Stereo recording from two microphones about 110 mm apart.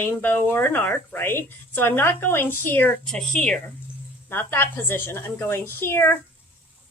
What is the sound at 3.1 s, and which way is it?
Speech, 5° left (ahead or behind).